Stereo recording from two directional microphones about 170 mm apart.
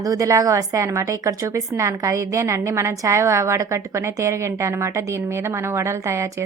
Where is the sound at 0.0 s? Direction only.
20° right (ahead or behind).